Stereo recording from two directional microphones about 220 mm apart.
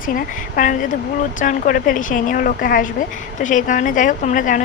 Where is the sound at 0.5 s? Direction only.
35° left (ahead or behind).